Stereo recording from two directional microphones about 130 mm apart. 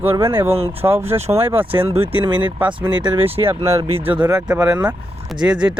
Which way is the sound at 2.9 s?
35° right (ahead or behind).